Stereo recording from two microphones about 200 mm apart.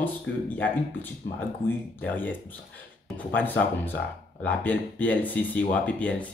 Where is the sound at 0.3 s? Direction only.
65° left (ahead or behind).